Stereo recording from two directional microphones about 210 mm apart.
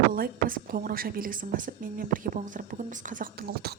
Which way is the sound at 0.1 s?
40° right (ahead or behind).